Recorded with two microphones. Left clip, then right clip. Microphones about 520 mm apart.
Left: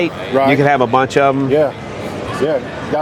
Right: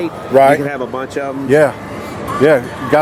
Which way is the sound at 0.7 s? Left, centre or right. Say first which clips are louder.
Left 9 dB; left.